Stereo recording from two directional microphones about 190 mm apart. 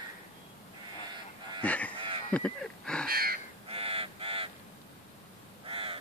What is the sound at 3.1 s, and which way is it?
Crow, 50° right (ahead or behind).